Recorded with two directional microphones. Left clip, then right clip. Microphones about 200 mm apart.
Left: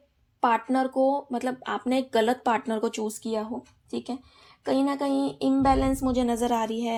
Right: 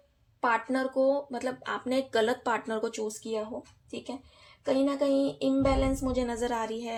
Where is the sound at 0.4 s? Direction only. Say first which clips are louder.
Left 4 dB; 35° left (ahead or behind).